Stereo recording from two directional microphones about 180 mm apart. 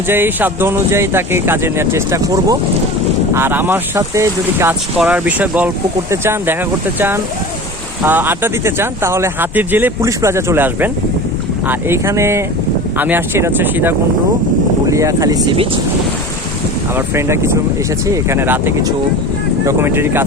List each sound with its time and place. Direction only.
0.1 s speech: 10° right (ahead or behind)
8.0 s speech: 10° right (ahead or behind)
16.9 s speech: 15° right (ahead or behind)